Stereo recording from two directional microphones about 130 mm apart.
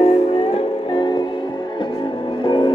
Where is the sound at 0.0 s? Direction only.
50° left (ahead or behind).